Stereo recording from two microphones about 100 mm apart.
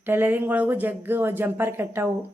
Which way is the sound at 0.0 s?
20° right (ahead or behind).